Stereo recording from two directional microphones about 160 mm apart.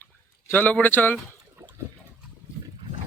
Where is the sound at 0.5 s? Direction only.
10° left (ahead or behind).